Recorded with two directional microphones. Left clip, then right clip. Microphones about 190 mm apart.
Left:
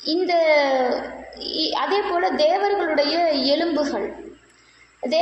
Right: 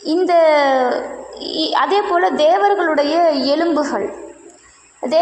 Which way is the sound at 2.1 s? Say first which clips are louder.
Right 4 dB; 10° right (ahead or behind).